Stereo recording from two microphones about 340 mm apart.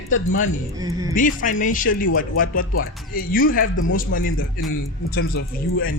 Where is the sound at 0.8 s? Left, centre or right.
Centre.